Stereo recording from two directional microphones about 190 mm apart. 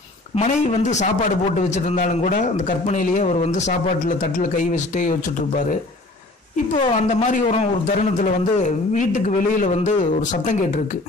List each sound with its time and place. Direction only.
0.4 s speech: 40° left (ahead or behind)
6.5 s speech: 35° left (ahead or behind)